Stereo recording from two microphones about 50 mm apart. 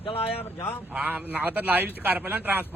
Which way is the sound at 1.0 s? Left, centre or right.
Right.